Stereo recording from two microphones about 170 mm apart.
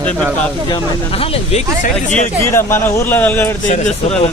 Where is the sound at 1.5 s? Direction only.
40° left (ahead or behind).